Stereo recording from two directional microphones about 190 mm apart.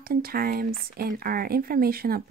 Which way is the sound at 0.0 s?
50° right (ahead or behind).